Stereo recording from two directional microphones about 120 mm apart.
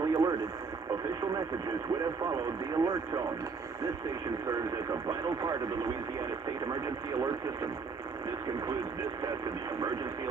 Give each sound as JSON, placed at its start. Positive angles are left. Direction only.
{"t": 0.0, "sound": "radio", "side_deg": -30}
{"t": 2.2, "sound": "speech", "side_deg": -30}
{"t": 5.0, "sound": "speech", "side_deg": -25}
{"t": 6.7, "sound": "speech", "side_deg": -30}